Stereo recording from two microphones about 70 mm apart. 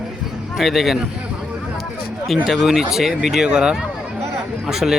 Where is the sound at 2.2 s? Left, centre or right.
Centre.